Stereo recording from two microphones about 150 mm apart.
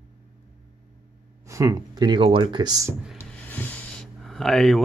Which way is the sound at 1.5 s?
20° right (ahead or behind).